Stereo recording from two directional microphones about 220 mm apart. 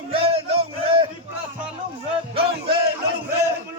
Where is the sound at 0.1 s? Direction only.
25° right (ahead or behind).